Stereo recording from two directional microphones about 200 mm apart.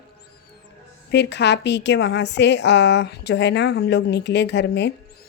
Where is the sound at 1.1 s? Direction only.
60° left (ahead or behind).